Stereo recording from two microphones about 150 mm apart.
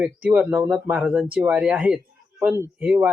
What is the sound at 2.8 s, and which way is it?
Speech, 10° right (ahead or behind).